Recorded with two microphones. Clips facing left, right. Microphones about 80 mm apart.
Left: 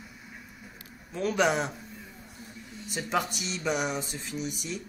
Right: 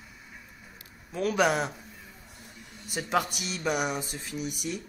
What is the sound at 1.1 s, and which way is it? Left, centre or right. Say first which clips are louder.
Speech: right 1 dB; centre.